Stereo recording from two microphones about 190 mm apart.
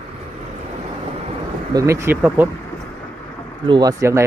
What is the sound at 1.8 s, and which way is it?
Speech, 15° right (ahead or behind).